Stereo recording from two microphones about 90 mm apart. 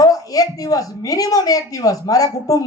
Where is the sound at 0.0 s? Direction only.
40° left (ahead or behind).